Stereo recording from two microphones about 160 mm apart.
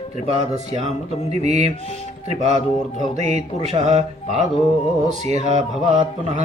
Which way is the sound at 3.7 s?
45° right (ahead or behind).